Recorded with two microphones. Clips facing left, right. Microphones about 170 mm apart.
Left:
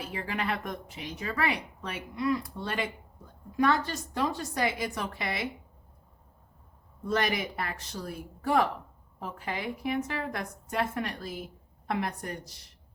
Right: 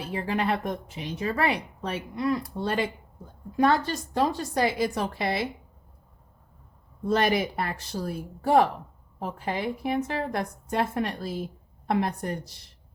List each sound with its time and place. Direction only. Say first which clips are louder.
0.0 s a woman's voice: right 6 dB; 30° right (ahead or behind)
7.0 s a woman's voice: right 5 dB; 30° right (ahead or behind)